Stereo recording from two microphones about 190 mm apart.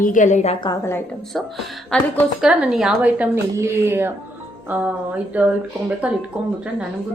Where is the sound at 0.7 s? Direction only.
15° left (ahead or behind).